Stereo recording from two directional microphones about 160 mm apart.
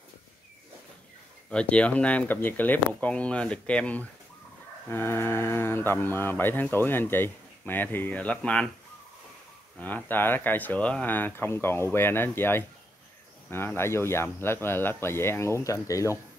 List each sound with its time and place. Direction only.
1.5 s speech: 5° left (ahead or behind)
9.8 s speech: 10° left (ahead or behind)